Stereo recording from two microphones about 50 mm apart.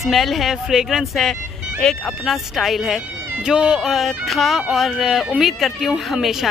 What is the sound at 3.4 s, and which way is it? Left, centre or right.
Speech, centre.